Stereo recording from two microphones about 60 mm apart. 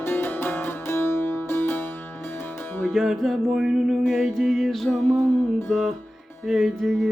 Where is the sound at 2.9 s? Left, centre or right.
Centre.